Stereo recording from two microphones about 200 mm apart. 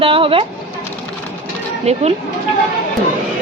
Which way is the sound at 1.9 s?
35° right (ahead or behind).